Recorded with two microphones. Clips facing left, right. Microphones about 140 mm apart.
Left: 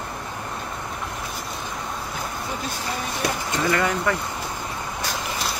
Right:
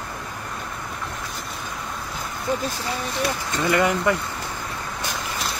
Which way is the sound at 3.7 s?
20° right (ahead or behind).